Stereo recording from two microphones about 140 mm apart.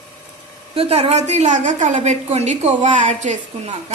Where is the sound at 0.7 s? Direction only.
45° right (ahead or behind).